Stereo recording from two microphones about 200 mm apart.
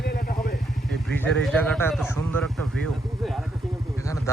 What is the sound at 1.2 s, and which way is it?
Speech, 5° left (ahead or behind).